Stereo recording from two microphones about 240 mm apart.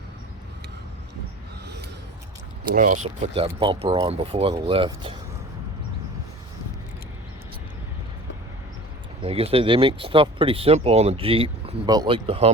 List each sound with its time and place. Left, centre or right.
2.7 s speech: right
9.2 s speech: right